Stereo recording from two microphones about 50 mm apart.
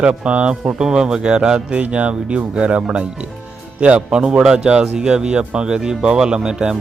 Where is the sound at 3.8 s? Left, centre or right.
Right.